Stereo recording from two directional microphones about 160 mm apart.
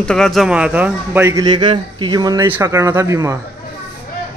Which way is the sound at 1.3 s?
25° right (ahead or behind).